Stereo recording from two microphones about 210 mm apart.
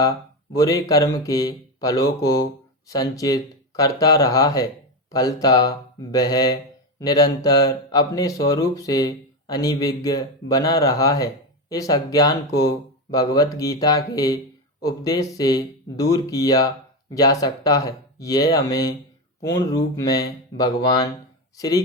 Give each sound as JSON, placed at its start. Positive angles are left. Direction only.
{"t": 0.5, "sound": "speech", "side_deg": 15}